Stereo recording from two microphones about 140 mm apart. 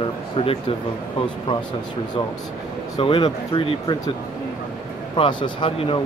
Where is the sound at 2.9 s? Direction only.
35° left (ahead or behind).